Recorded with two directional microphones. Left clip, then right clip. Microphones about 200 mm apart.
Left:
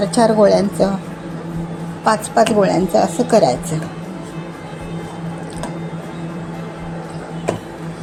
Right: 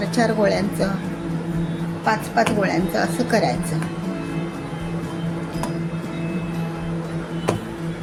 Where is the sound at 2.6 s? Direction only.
20° left (ahead or behind).